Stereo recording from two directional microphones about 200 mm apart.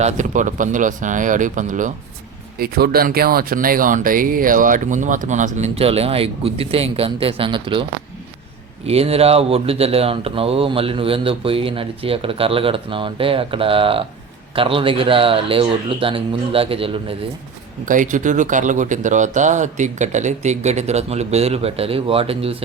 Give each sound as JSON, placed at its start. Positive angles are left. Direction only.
{"t": 0.0, "sound": "speech", "side_deg": -40}
{"t": 2.6, "sound": "speech", "side_deg": -50}
{"t": 8.9, "sound": "speech", "side_deg": -30}
{"t": 17.8, "sound": "speech", "side_deg": -40}